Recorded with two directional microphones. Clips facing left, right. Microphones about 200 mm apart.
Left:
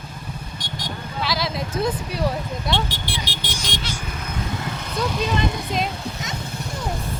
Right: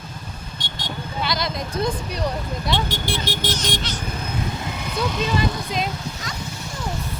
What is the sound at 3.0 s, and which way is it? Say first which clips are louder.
Vehicle: right 5 dB; 45° right (ahead or behind).